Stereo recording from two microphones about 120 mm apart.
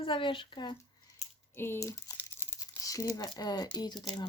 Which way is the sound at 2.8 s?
30° left (ahead or behind).